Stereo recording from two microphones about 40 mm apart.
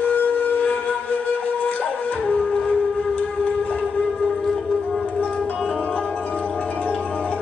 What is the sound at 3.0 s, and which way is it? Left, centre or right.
Civil defense siren, left.